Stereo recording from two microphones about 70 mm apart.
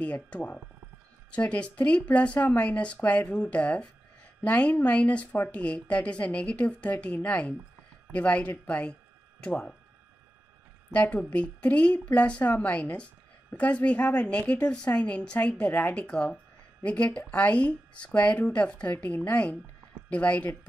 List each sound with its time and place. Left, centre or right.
0.0 s speech: centre
10.9 s speech: left